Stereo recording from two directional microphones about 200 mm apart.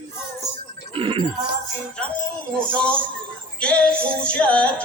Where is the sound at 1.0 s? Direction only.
25° right (ahead or behind).